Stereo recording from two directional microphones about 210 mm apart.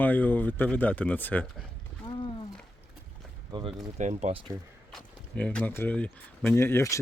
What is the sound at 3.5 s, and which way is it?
Speech, 25° right (ahead or behind).